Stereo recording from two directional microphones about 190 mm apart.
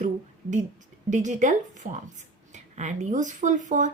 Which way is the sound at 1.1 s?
40° right (ahead or behind).